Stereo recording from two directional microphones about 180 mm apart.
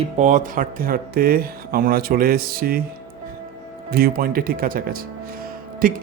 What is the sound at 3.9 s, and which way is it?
Speech, 55° right (ahead or behind).